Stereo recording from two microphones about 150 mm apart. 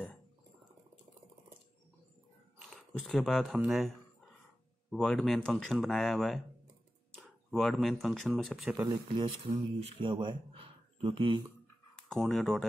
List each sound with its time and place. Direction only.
2.7 s speech: centre (ahead or behind)
4.9 s speech: 5° left (ahead or behind)
8.8 s speech: 35° right (ahead or behind)
12.1 s speech: 5° left (ahead or behind)